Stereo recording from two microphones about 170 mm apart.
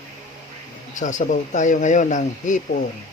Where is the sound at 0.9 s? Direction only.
45° left (ahead or behind).